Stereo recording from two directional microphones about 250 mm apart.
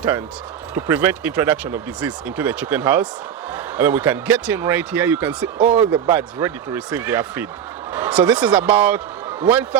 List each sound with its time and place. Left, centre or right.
0.7 s speech: centre